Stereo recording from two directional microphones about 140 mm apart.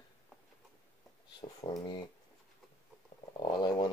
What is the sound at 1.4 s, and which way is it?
Speech, 35° left (ahead or behind).